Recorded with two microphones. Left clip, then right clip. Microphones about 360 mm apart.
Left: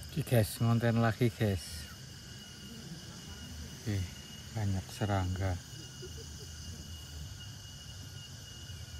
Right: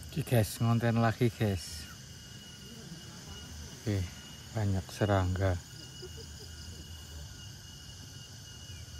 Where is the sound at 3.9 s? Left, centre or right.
Centre.